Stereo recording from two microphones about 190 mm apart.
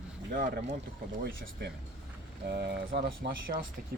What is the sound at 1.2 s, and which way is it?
Speech, 60° right (ahead or behind).